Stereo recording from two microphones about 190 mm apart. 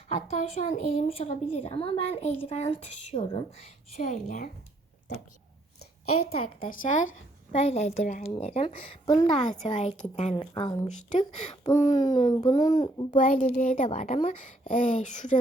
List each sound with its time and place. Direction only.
0.1 s a woman's voice: 35° left (ahead or behind)
6.6 s speech: 45° left (ahead or behind)
7.5 s a woman's voice: 30° left (ahead or behind)
9.7 s a woman's voice: 40° left (ahead or behind)
10.3 s speech: 25° left (ahead or behind)
10.8 s a woman's voice: 40° left (ahead or behind)
11.6 s speech: 20° left (ahead or behind)
13.1 s a woman's voice: 45° left (ahead or behind)